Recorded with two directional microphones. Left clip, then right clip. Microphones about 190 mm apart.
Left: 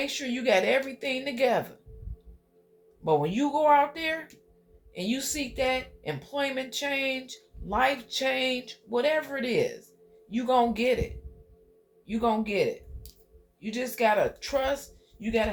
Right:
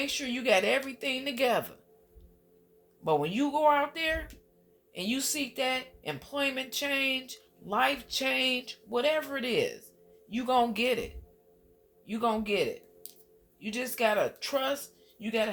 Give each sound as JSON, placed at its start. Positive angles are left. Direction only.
{"t": 0.0, "sound": "speech", "side_deg": -25}
{"t": 3.0, "sound": "a man's voice", "side_deg": -30}
{"t": 12.0, "sound": "speech", "side_deg": -30}